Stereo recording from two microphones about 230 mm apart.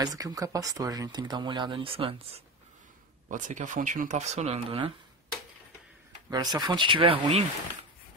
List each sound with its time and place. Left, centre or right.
0.0 s speech: centre
6.3 s speech: centre